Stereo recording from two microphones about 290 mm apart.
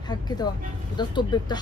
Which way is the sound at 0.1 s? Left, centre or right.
Centre.